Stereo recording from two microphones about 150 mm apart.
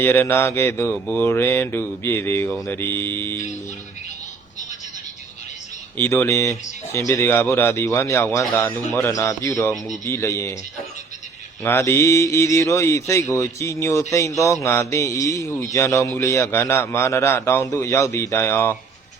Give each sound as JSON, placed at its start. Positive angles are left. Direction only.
{"t": 0.0, "sound": "speech", "side_deg": 15}
{"t": 6.0, "sound": "speech", "side_deg": 15}
{"t": 11.6, "sound": "speech", "side_deg": 15}